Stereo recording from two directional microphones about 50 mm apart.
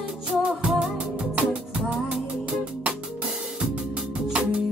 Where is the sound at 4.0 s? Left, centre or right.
Centre.